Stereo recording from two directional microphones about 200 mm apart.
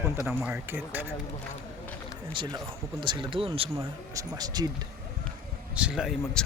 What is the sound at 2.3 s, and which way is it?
Speech, 25° right (ahead or behind).